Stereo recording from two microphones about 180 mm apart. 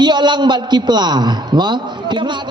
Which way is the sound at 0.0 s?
25° right (ahead or behind).